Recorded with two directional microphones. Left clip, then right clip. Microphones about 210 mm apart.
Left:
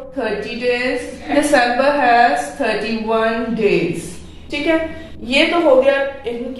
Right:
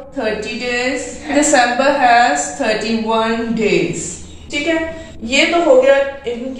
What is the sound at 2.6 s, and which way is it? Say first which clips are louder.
Speech: right 3 dB; 15° left (ahead or behind).